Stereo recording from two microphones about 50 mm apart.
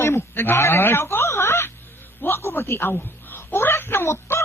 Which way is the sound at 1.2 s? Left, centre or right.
Left.